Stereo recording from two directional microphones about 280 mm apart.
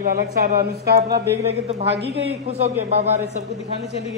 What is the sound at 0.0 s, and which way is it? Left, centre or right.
Speech, right.